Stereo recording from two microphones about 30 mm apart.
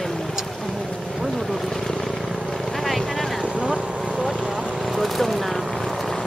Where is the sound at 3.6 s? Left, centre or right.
Right.